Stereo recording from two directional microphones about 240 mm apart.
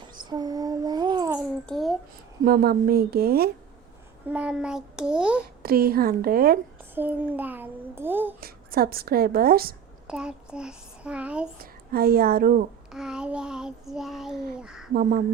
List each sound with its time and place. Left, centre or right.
0.1 s child singing: centre
1.6 s a sound: centre
2.4 s speech: right
4.3 s child singing: centre
5.6 s speech: right
6.9 s a child's voice: centre
8.4 s speech: right
10.1 s a sound: centre
11.6 s speech: right
12.9 s child singing: centre